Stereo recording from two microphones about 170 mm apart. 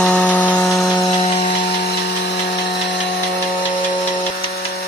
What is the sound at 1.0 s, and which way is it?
Music, 30° left (ahead or behind).